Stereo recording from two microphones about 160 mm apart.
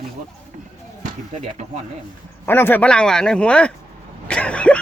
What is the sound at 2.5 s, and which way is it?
Speech, 15° left (ahead or behind).